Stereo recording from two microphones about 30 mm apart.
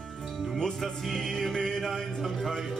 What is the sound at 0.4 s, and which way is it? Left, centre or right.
Speech, centre.